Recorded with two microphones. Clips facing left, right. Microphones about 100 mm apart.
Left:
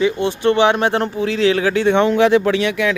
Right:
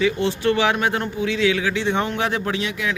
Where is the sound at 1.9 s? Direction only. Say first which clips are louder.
Left 10 dB; 90° left; by 2.9 s 75° left (ahead or behind).